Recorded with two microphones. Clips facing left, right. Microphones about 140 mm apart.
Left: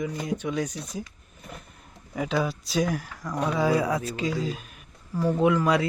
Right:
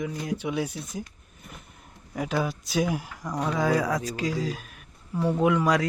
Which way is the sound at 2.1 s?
Centre (ahead or behind).